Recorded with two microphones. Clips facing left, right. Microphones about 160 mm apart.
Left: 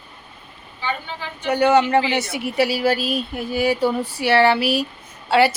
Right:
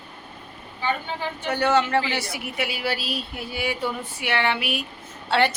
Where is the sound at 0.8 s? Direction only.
50° right (ahead or behind).